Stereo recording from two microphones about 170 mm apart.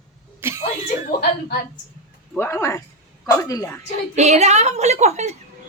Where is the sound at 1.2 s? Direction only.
65° left (ahead or behind).